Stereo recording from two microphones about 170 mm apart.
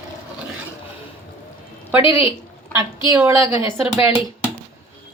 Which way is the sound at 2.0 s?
30° left (ahead or behind).